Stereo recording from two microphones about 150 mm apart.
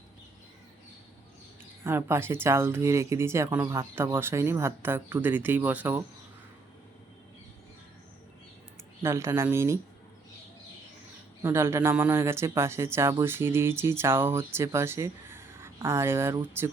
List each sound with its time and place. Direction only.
1.8 s speech: 15° right (ahead or behind)
9.0 s speech: 20° right (ahead or behind)
11.4 s speech: 15° right (ahead or behind)